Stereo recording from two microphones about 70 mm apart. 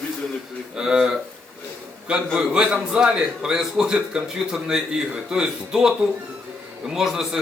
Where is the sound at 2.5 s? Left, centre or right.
Centre.